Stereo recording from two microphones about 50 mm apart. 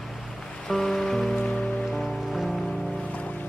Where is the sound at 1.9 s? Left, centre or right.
Centre.